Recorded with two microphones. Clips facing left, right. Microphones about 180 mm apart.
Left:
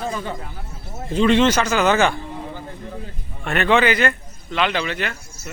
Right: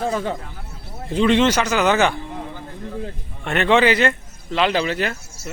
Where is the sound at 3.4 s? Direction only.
25° right (ahead or behind).